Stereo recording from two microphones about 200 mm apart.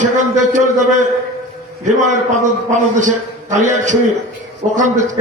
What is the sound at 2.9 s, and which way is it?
A man's voice, 40° right (ahead or behind).